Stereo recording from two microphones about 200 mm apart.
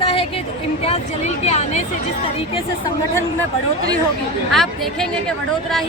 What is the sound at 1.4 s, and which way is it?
Speech, 35° left (ahead or behind).